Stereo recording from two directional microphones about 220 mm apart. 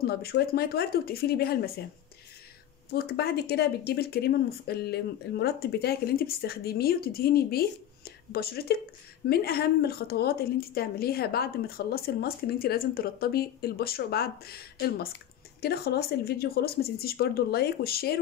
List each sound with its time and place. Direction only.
0.0 s speech: 45° left (ahead or behind)
2.9 s speech: 45° left (ahead or behind)